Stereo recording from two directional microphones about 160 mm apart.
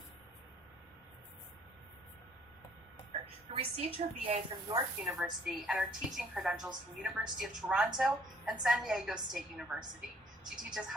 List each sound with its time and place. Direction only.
3.1 s a woman's voice: 40° right (ahead or behind)
5.0 s a woman's voice: centre (ahead or behind)